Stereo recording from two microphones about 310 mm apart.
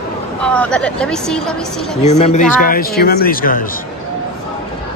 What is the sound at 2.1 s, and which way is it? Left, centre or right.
A man's voice, left.